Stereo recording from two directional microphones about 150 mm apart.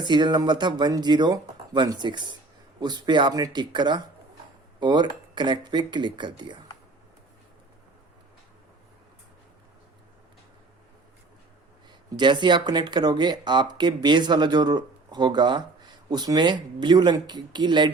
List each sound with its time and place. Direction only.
0.0 s speech: 30° right (ahead or behind)
12.1 s speech: 30° right (ahead or behind)